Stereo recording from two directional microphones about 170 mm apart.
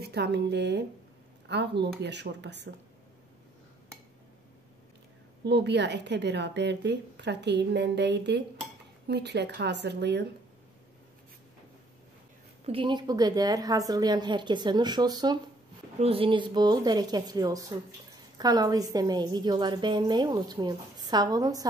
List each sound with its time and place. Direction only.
0.0 s a woman's voice: 75° right (ahead or behind)
2.0 s a woman's voice: 90° right
5.4 s a woman's voice: 90° right
12.6 s a woman's voice: 30° right (ahead or behind)
16.0 s a woman's voice: 35° right (ahead or behind)